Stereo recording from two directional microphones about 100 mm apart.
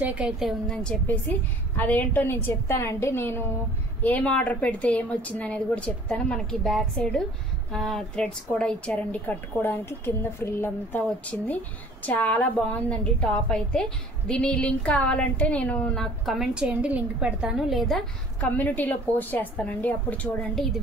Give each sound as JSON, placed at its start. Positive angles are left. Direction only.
{"t": 0.0, "sound": "a woman's voice", "side_deg": -15}
{"t": 0.4, "sound": "a woman's voice", "side_deg": -5}
{"t": 1.8, "sound": "a woman's voice", "side_deg": 20}
{"t": 18.4, "sound": "a woman's voice", "side_deg": 15}